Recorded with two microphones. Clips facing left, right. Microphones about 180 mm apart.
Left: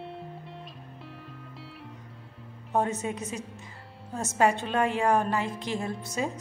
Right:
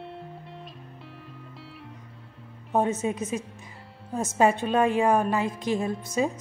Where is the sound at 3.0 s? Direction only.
20° right (ahead or behind).